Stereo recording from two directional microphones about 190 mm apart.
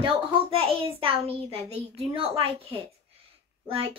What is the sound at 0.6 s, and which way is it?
A child's voice, 30° right (ahead or behind).